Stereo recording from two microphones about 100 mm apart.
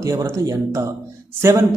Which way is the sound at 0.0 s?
30° right (ahead or behind).